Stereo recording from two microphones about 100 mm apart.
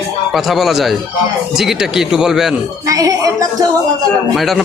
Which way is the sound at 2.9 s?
35° right (ahead or behind).